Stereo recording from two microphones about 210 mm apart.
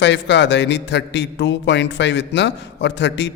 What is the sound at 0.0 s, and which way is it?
A man's voice, 55° left (ahead or behind).